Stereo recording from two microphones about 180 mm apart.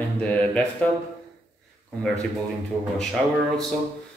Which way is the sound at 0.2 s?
5° left (ahead or behind).